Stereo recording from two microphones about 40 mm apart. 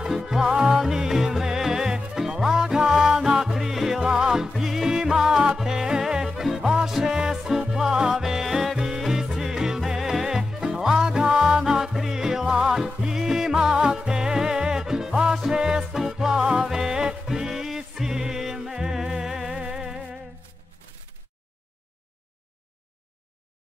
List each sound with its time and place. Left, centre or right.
0.0 s music: centre
15.8 s music: centre